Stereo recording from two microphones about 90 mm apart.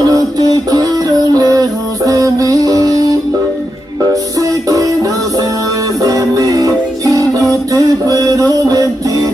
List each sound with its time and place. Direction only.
0.0 s music: 40° right (ahead or behind)
6.0 s music: 40° right (ahead or behind)